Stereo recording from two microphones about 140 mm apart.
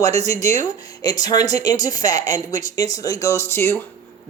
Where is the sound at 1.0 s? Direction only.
30° left (ahead or behind).